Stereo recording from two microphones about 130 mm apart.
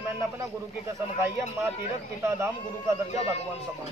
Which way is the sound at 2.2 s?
20° right (ahead or behind).